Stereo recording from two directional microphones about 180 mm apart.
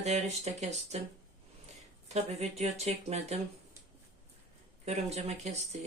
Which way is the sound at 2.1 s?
35° right (ahead or behind).